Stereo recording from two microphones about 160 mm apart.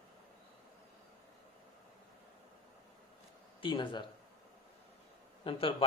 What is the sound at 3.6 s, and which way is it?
Speech, 30° left (ahead or behind).